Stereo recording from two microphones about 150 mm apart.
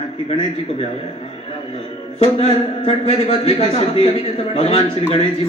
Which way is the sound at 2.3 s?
40° left (ahead or behind).